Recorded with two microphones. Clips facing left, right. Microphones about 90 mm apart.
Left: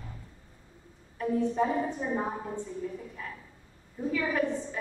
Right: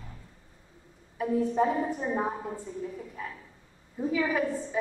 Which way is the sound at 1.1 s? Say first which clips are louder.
Right 1 dB; 5° right (ahead or behind).